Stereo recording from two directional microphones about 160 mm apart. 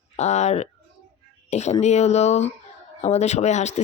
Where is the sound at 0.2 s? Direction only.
45° left (ahead or behind).